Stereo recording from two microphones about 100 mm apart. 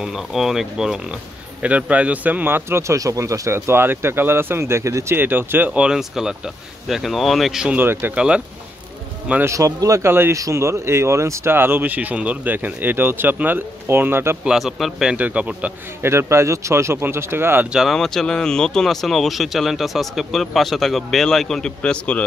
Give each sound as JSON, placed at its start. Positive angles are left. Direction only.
{"t": 0.0, "sound": "a man's voice", "side_deg": -5}
{"t": 5.7, "sound": "speech", "side_deg": -5}
{"t": 7.7, "sound": "a man's voice", "side_deg": -20}
{"t": 9.4, "sound": "a man's voice", "side_deg": -30}
{"t": 14.4, "sound": "speech", "side_deg": -5}
{"t": 15.1, "sound": "a man's voice", "side_deg": -15}
{"t": 16.0, "sound": "a man's voice", "side_deg": -25}
{"t": 17.7, "sound": "speech", "side_deg": 0}